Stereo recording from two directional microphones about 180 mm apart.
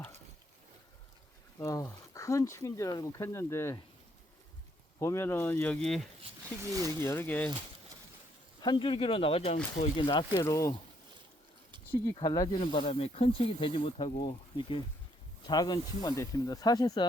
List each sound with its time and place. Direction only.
1.5 s speech: 20° left (ahead or behind)
4.9 s speech: 15° left (ahead or behind)
6.6 s speech: 20° right (ahead or behind)
7.0 s speech: 15° left (ahead or behind)
8.6 s speech: 25° left (ahead or behind)
10.3 s speech: 15° left (ahead or behind)
12.0 s speech: 20° left (ahead or behind)